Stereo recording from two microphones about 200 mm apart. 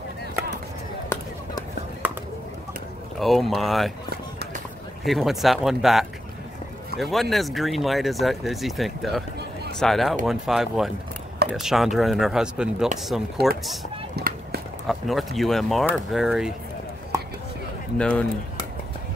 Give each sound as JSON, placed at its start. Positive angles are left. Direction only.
{"t": 1.0, "sound": "a sound", "side_deg": 15}
{"t": 2.0, "sound": "a sound", "side_deg": -10}
{"t": 3.2, "sound": "speech", "side_deg": 0}
{"t": 5.0, "sound": "speech", "side_deg": 0}
{"t": 14.1, "sound": "run", "side_deg": -55}
{"t": 14.9, "sound": "speech", "side_deg": 0}
{"t": 17.9, "sound": "speech", "side_deg": 5}